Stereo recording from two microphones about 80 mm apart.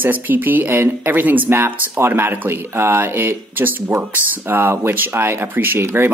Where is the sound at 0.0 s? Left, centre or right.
Right.